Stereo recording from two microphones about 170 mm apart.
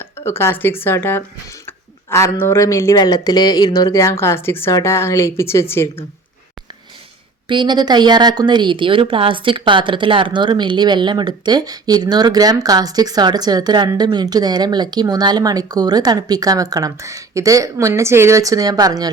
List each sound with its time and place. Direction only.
0.3 s speech: 15° left (ahead or behind)
7.4 s a woman's voice: 25° right (ahead or behind)